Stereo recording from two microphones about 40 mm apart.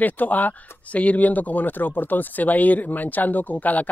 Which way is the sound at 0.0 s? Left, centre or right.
Left.